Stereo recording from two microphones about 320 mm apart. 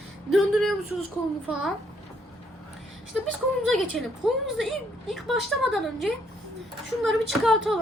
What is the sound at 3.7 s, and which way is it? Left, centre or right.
A woman's voice, centre.